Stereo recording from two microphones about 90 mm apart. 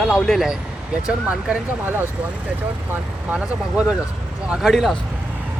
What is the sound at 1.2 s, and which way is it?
Speech, 20° right (ahead or behind).